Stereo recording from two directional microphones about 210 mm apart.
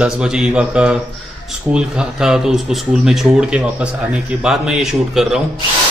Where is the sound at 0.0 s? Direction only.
5° right (ahead or behind).